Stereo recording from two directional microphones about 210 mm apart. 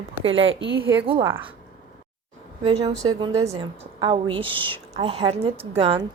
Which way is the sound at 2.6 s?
30° right (ahead or behind).